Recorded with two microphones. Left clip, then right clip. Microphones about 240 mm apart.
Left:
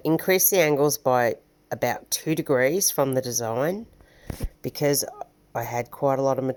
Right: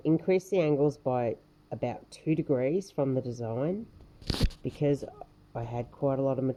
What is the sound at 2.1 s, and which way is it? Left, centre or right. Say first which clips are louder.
Speech: left 5 dB; left.